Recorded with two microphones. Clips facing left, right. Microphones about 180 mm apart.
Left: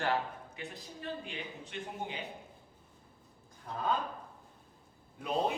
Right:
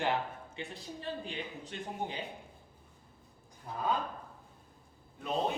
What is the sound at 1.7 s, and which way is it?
Speech, 35° right (ahead or behind).